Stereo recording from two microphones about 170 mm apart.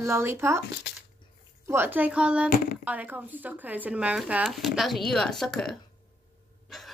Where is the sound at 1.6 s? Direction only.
15° right (ahead or behind); by 5.7 s centre (ahead or behind).